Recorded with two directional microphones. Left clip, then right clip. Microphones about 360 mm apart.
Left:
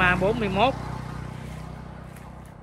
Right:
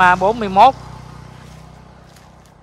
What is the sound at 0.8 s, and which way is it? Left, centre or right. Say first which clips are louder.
Vehicle: left 1 dB; left.